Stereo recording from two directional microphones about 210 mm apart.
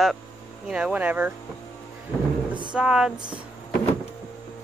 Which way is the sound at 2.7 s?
5° right (ahead or behind).